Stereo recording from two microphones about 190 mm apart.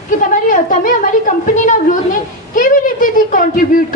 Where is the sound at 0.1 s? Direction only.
45° left (ahead or behind).